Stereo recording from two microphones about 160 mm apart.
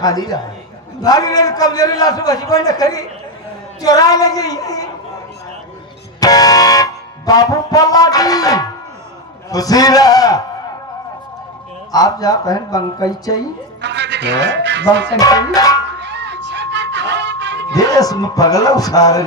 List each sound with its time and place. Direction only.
0.0 s a man's voice: 25° left (ahead or behind)
6.1 s music: 25° left (ahead or behind)
9.5 s a man's voice: 25° left (ahead or behind)
11.9 s a man's voice: 25° left (ahead or behind)
13.8 s speech: 90° right
15.2 s a man's voice: 25° left (ahead or behind)
16.0 s music: 90° right
17.7 s a man's voice: 25° left (ahead or behind)